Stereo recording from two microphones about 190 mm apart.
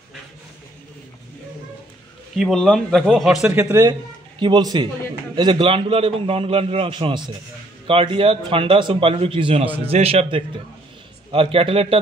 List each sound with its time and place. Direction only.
2.3 s a man's voice: centre (ahead or behind)
3.5 s a man's voice: 15° right (ahead or behind)